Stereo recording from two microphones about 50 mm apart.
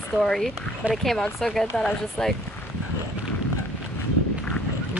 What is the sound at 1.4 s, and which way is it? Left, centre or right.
Speech, centre.